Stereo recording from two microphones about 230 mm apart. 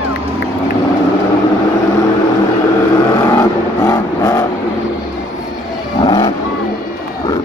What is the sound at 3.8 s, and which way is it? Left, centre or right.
Vehicle, centre.